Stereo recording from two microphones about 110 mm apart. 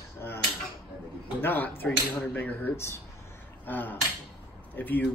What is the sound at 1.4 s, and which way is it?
Speech, 15° left (ahead or behind).